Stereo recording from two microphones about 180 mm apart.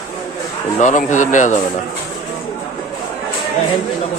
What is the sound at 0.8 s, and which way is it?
Speech, 45° left (ahead or behind).